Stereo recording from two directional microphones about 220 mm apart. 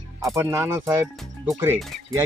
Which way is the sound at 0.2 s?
15° right (ahead or behind).